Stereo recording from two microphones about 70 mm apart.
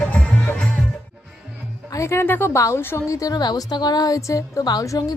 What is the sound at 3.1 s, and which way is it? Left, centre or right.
Speech, left.